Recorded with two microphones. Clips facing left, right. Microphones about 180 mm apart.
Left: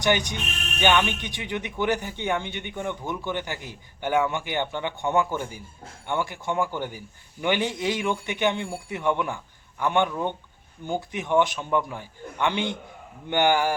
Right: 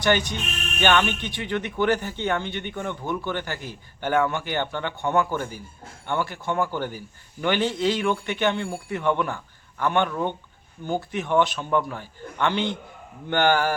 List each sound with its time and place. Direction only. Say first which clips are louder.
0.0 s speech: right 1 dB; 15° left (ahead or behind)